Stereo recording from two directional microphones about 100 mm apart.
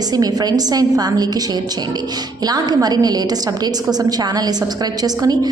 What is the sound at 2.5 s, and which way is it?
A woman's voice, 40° right (ahead or behind).